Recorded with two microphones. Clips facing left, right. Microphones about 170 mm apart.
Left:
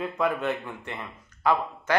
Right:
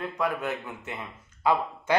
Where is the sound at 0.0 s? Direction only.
Centre (ahead or behind).